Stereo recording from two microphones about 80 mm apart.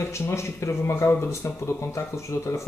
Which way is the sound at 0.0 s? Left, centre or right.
Left.